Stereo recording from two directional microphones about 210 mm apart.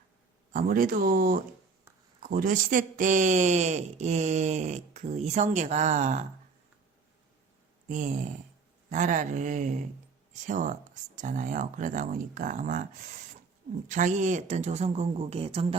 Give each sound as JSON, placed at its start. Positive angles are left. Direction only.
{"t": 0.5, "sound": "speech", "side_deg": -40}
{"t": 7.9, "sound": "speech", "side_deg": -35}
{"t": 13.8, "sound": "speech", "side_deg": -35}